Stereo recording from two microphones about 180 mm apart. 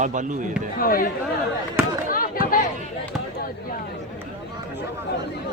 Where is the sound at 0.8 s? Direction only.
55° left (ahead or behind).